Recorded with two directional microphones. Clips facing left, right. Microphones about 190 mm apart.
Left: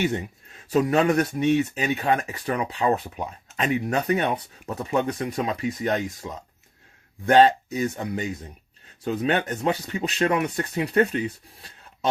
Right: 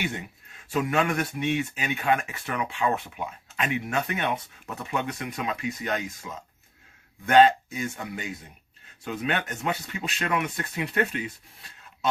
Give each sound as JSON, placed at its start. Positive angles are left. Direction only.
{"t": 0.7, "sound": "speech", "side_deg": 40}
{"t": 9.0, "sound": "speech", "side_deg": 35}